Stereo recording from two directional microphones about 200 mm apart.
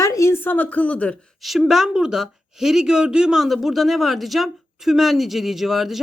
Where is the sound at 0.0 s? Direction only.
15° left (ahead or behind).